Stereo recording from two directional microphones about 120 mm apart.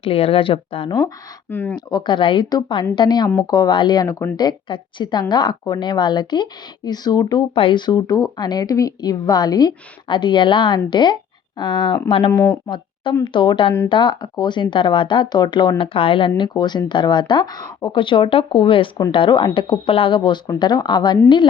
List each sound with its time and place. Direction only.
0.0 s speech: 50° left (ahead or behind)
1.5 s speech: 15° left (ahead or behind)
1.7 s speech: 35° left (ahead or behind)
7.5 s speech: 45° left (ahead or behind)
12.3 s speech: 25° left (ahead or behind)
12.6 s speech: 40° left (ahead or behind)